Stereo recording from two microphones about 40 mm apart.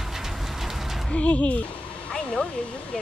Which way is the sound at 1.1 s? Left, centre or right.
Left.